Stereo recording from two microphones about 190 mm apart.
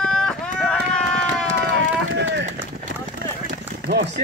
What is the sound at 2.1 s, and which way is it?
Run, 65° right (ahead or behind).